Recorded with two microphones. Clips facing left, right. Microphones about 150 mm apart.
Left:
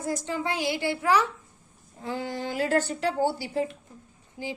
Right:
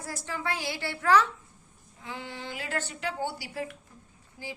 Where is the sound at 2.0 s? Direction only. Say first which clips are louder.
Left 8 dB; 40° left (ahead or behind).